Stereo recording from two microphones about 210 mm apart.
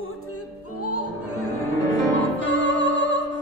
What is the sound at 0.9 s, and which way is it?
Opera, 90° left.